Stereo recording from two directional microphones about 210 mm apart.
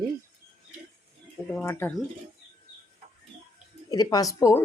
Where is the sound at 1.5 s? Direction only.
10° left (ahead or behind).